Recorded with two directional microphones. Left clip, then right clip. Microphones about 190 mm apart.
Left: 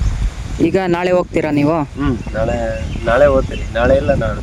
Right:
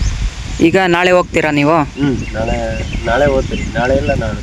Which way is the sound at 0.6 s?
Centre (ahead or behind).